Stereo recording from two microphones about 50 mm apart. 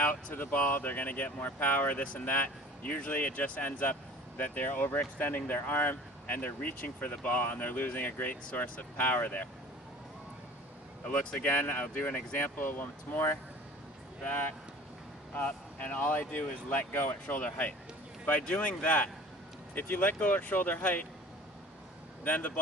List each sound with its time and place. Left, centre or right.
0.0 s speech: left
11.2 s speech: left
11.4 s speech: left
15.4 s speech: left
17.2 s speech: left
22.2 s speech: left